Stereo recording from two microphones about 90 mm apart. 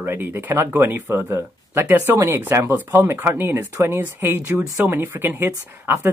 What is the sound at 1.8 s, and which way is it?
Speech, 25° right (ahead or behind).